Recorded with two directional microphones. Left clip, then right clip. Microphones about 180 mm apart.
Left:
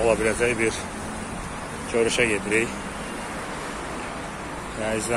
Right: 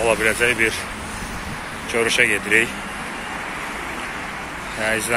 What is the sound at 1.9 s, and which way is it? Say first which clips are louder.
Speech: right 4 dB; 5° left (ahead or behind).